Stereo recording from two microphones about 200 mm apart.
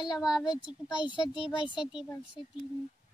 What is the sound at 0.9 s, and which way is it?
Speech, 25° left (ahead or behind).